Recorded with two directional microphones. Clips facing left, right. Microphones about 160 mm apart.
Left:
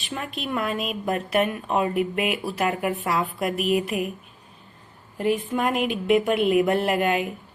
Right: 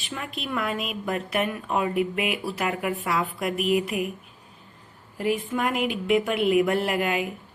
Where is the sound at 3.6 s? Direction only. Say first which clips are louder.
Even; 20° right (ahead or behind).